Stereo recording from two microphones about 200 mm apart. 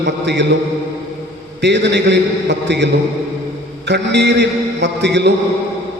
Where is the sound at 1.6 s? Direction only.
60° right (ahead or behind).